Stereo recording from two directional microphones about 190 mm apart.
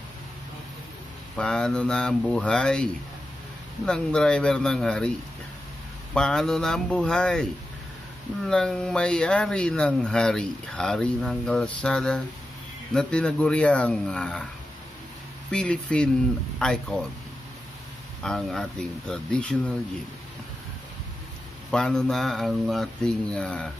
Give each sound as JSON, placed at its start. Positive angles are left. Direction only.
{"t": 1.3, "sound": "speech", "side_deg": 5}
{"t": 6.1, "sound": "speech", "side_deg": 5}
{"t": 8.5, "sound": "speech", "side_deg": 5}
{"t": 15.5, "sound": "speech", "side_deg": 5}
{"t": 18.2, "sound": "speech", "side_deg": 5}
{"t": 21.6, "sound": "speech", "side_deg": 5}